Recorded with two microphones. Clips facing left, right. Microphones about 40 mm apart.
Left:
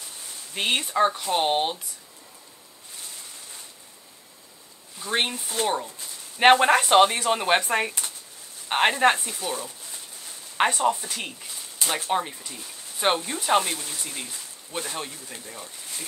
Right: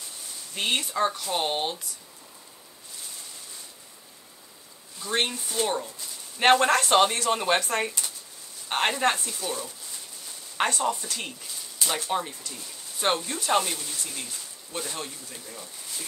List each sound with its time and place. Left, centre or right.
0.6 s speech: left
5.0 s speech: centre
5.5 s speech: left
6.3 s speech: centre
10.6 s speech: centre
15.2 s speech: left